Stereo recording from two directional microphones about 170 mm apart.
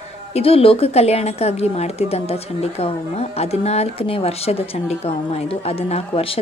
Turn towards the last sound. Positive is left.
turn(degrees=35)  # may be behind; listen again after turning